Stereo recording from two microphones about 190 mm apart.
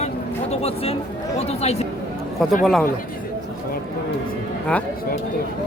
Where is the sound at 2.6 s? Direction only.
Centre (ahead or behind).